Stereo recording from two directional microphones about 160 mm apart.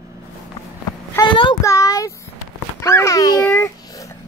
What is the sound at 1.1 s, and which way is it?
Speech, 30° left (ahead or behind).